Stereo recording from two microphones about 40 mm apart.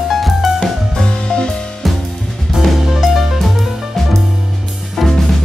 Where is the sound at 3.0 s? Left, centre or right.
Centre.